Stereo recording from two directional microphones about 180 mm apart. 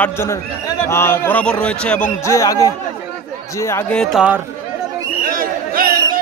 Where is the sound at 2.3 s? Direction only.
20° left (ahead or behind).